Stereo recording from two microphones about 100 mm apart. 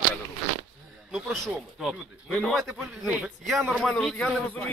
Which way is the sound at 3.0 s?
10° right (ahead or behind).